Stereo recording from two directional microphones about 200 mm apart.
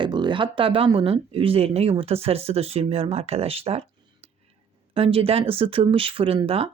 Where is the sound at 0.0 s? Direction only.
25° right (ahead or behind).